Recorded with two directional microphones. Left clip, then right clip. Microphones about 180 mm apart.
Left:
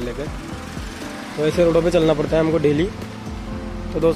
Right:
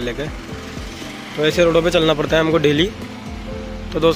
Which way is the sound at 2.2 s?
5° right (ahead or behind).